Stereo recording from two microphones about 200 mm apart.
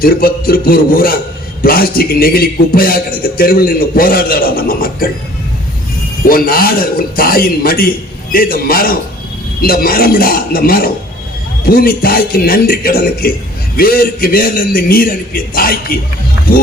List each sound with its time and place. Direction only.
0.0 s a man's voice: 45° left (ahead or behind)
6.2 s a man's voice: 45° left (ahead or behind)